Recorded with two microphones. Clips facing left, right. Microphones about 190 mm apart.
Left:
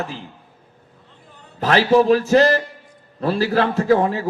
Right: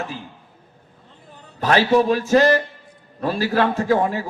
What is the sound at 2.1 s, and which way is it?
Speech, 35° left (ahead or behind).